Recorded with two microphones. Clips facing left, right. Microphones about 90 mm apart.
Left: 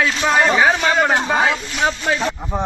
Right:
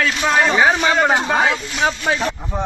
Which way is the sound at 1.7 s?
15° right (ahead or behind).